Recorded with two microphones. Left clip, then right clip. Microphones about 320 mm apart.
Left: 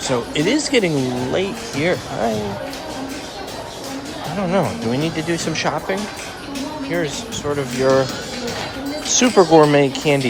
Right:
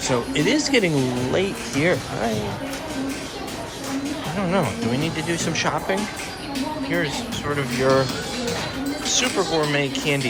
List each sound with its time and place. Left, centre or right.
0.1 s speech: centre
4.4 s speech: centre
9.0 s speech: left